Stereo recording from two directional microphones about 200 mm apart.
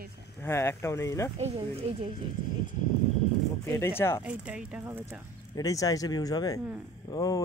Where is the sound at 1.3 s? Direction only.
30° right (ahead or behind).